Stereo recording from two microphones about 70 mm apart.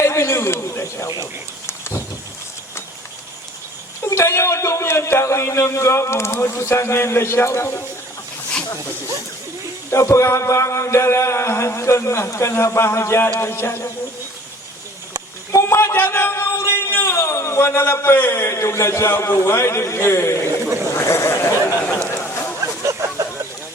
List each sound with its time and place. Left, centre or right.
0.0 s a man's voice: left
1.0 s speech: left
1.6 s vehicle: left
4.0 s a man's voice: left
9.9 s a sound: left
13.4 s a man's voice: left
15.6 s a man's voice: left
22.9 s a sound: right